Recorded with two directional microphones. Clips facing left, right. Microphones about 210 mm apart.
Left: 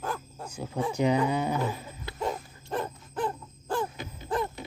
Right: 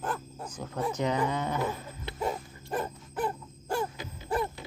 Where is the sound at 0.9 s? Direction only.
10° left (ahead or behind).